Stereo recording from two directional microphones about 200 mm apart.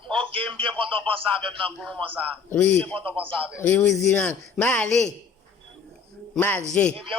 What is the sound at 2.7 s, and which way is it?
Speech, 5° left (ahead or behind).